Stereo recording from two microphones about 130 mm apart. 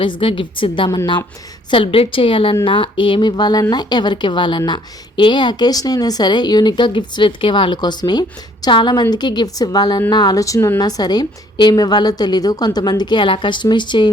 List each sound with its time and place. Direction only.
0.0 s a woman's voice: 40° left (ahead or behind)